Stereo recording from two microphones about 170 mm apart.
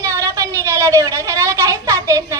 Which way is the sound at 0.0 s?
15° right (ahead or behind).